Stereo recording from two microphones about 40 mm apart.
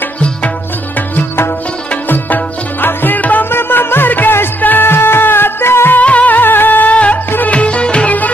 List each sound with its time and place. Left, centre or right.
2.0 s music: left
3.4 s music: left
4.8 s music: left
5.9 s music: left
7.5 s music: left